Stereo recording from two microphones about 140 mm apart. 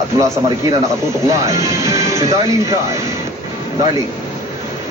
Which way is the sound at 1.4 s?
20° right (ahead or behind).